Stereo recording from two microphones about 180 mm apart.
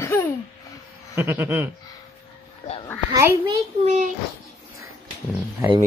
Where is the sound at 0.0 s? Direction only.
15° left (ahead or behind).